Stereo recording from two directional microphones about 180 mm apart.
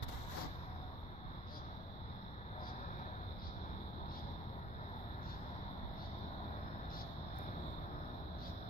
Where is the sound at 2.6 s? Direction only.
40° left (ahead or behind).